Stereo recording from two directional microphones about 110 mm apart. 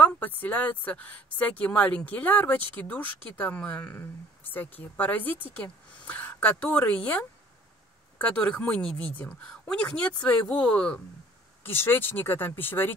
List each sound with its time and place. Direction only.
0.0 s speech: 15° left (ahead or behind)
11.6 s speech: 20° left (ahead or behind)